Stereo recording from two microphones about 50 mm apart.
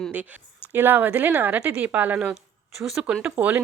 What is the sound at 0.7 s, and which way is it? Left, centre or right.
A woman's voice, right.